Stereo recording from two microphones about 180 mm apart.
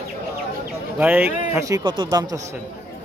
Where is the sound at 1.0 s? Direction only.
10° right (ahead or behind).